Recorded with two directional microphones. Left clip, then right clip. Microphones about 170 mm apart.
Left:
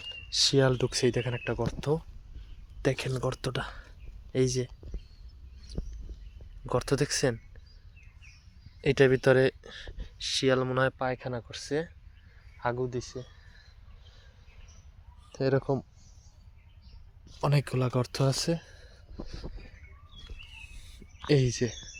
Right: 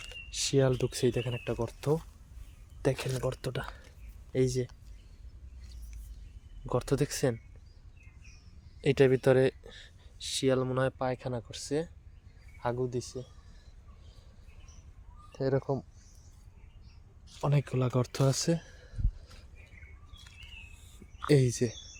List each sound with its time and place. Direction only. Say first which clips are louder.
0.3 s speech: left 4 dB; centre (ahead or behind)
5.7 s a sound: left 18 dB; 10° right (ahead or behind)
6.7 s speech: left 2 dB; 10° right (ahead or behind)
8.8 s speech: left 2 dB; 10° right (ahead or behind)
10.9 s speech: left 1 dB; 20° right (ahead or behind)
15.3 s speech: left 3 dB; 5° left (ahead or behind)
17.2 s speech: left 3 dB; 5° right (ahead or behind); by 18.9 s 20° right (ahead or behind)
20.8 s a sound: even; 15° right (ahead or behind)